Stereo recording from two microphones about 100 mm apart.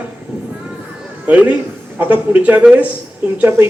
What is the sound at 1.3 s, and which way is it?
Speech, 15° right (ahead or behind).